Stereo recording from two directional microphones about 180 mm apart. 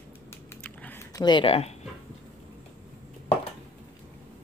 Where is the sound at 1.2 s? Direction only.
25° left (ahead or behind).